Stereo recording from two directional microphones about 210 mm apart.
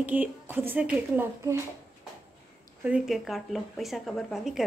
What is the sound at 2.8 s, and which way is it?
A woman's voice, 5° right (ahead or behind).